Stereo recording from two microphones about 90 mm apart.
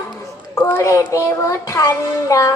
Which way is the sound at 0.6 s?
35° left (ahead or behind).